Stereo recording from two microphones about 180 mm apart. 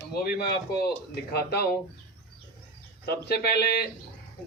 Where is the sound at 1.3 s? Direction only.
60° left (ahead or behind).